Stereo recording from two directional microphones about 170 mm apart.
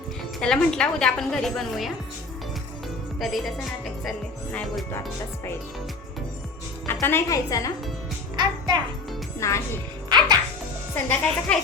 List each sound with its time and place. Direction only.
0.4 s a woman's voice: 5° left (ahead or behind)
3.2 s a woman's voice: centre (ahead or behind)
4.5 s a woman's voice: centre (ahead or behind)
6.8 s a woman's voice: 15° left (ahead or behind)
8.4 s a child's voice: 25° right (ahead or behind)
9.4 s speech: 15° left (ahead or behind)
10.9 s speech: 10° left (ahead or behind)